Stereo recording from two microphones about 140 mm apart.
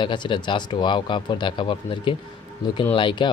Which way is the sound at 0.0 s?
35° left (ahead or behind).